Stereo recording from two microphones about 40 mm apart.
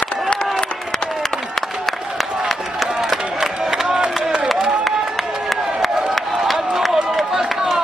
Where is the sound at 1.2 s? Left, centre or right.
Centre.